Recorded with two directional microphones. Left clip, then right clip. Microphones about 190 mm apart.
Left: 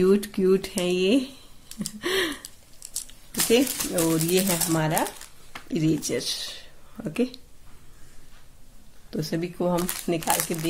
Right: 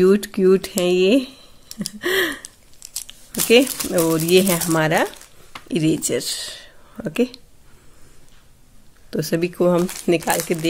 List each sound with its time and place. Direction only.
0.0 s speech: 30° right (ahead or behind)
2.0 s gasp: 25° right (ahead or behind)
3.4 s speech: 40° right (ahead or behind)
9.1 s speech: 45° right (ahead or behind)